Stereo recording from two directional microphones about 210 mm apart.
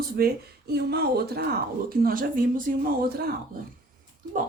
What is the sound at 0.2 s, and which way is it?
Speech, 50° right (ahead or behind).